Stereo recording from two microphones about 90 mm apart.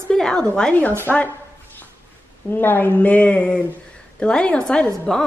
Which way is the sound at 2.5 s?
20° left (ahead or behind).